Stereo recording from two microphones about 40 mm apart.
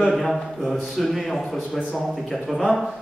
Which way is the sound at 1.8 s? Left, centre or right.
Right.